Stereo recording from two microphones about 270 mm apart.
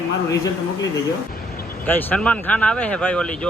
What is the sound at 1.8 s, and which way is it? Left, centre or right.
Speech, centre.